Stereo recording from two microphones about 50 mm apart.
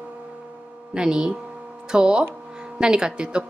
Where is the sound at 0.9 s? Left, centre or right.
Centre.